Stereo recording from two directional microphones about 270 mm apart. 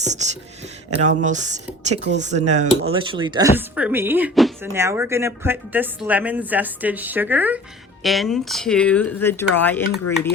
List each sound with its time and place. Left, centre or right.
0.0 s beatboxing: right
0.9 s speech: right
2.0 s speech: right
2.5 s speech: right; by 10.0 s centre